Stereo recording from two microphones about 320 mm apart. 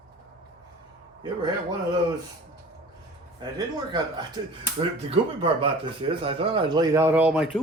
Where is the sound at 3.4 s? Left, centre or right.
Centre.